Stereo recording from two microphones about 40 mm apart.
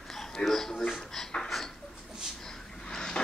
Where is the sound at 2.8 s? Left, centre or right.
Centre.